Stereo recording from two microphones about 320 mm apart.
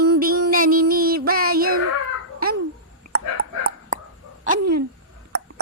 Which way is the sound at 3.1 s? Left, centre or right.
Right.